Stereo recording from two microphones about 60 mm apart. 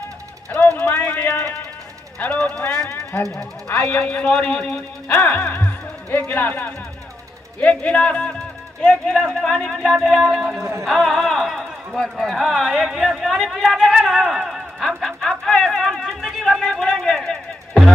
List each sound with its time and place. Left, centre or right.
0.5 s a sound: left
2.3 s speech: centre
2.9 s speech: left
3.9 s speech: centre
5.0 s speech: left
7.8 s speech: left
9.9 s a sound: centre
10.6 s music: right
10.9 s a sound: centre